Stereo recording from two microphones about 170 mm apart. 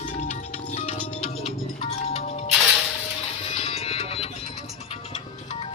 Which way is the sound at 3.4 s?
35° left (ahead or behind).